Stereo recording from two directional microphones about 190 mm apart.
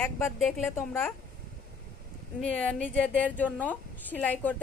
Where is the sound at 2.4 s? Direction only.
5° left (ahead or behind).